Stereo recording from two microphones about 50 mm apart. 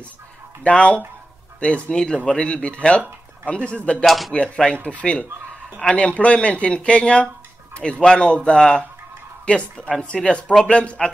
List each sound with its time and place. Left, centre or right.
0.7 s speech: left
4.0 s speech: centre
4.3 s speech: left